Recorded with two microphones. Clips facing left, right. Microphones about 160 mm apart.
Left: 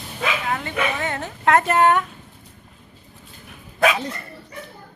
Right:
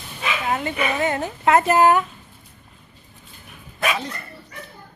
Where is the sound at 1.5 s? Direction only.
5° right (ahead or behind).